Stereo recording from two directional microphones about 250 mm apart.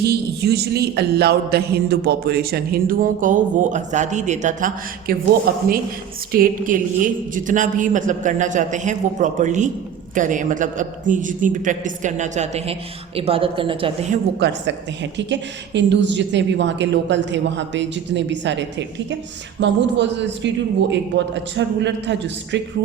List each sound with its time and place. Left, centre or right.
0.0 s a woman's voice: right
14.3 s a woman's voice: right